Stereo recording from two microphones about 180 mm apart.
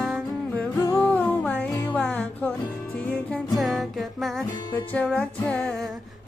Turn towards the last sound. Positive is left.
turn(degrees=5)  # may be behind; listen again after turning